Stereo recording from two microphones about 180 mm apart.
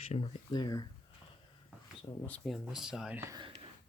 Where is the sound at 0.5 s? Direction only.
25° left (ahead or behind).